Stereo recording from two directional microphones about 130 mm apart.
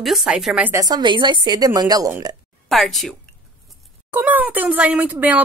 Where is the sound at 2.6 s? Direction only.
Centre (ahead or behind).